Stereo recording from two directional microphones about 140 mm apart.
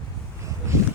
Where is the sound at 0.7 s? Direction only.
20° right (ahead or behind).